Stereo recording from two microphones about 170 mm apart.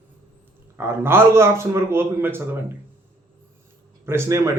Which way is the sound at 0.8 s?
15° right (ahead or behind).